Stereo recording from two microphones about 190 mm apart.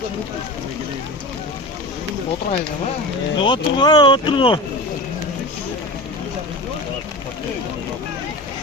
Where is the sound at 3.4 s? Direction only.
25° left (ahead or behind).